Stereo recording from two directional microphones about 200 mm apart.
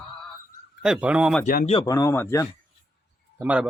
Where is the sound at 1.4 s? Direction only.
45° left (ahead or behind).